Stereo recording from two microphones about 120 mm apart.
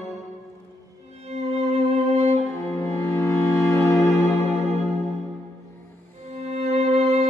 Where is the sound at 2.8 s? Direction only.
25° left (ahead or behind).